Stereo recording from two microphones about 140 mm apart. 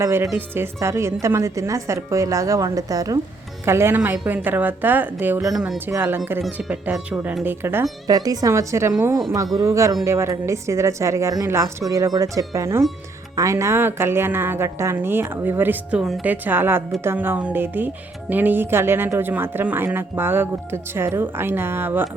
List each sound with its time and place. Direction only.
0.0 s a woman's voice: 20° right (ahead or behind)
5.9 s speech: 15° right (ahead or behind)
6.4 s speech: 5° right (ahead or behind)
8.0 s a woman's voice: 25° right (ahead or behind)